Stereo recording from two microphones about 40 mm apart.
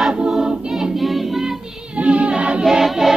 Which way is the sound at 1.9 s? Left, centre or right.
Right.